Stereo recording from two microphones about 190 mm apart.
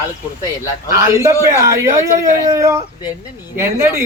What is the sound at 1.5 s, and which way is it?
Speech, 15° right (ahead or behind).